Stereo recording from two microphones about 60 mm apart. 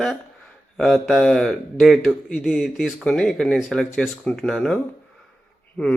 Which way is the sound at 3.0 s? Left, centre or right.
Centre.